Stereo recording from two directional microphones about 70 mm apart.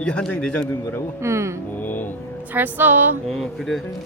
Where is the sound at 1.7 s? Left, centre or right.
Left.